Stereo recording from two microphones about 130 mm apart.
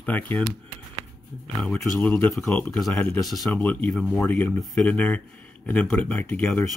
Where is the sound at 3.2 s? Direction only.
Centre (ahead or behind).